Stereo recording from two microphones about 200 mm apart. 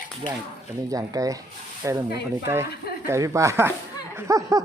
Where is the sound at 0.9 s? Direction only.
15° right (ahead or behind).